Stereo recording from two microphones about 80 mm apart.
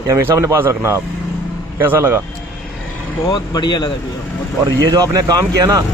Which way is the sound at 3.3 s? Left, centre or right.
Left.